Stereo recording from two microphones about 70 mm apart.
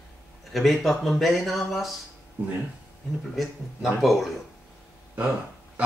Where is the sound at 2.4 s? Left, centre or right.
Right.